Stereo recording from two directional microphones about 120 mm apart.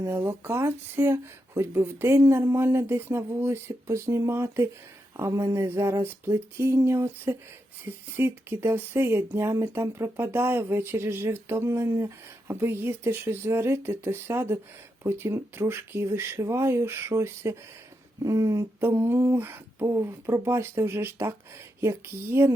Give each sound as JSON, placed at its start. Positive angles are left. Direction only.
{"t": 0.0, "sound": "speech", "side_deg": -20}